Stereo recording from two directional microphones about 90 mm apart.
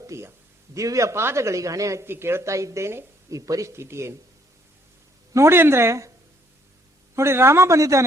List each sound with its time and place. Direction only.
0.1 s a man's voice: 30° right (ahead or behind)
5.3 s speech: 30° right (ahead or behind)
7.2 s a man's voice: 30° right (ahead or behind)